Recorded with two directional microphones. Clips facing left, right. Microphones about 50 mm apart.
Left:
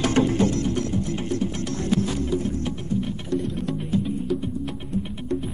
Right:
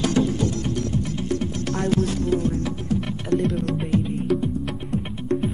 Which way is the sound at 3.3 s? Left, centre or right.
Right.